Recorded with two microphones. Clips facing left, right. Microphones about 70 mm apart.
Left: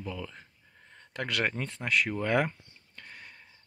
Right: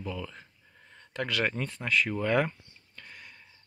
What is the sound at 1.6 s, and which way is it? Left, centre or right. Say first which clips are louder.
Speech: right 1 dB; left.